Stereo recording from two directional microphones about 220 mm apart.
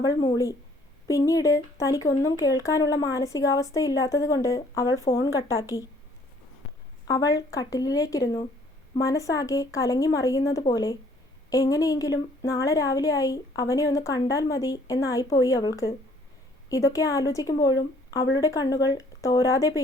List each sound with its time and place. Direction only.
0.0 s speech: 15° left (ahead or behind)
7.1 s speech: 15° left (ahead or behind)